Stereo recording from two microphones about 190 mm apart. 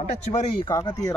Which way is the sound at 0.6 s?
20° left (ahead or behind).